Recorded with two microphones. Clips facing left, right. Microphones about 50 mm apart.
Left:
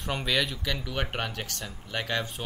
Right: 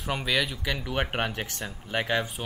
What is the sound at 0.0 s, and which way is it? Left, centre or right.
Speech, centre.